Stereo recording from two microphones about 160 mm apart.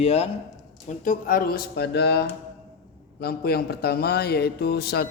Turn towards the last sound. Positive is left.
turn(degrees=85)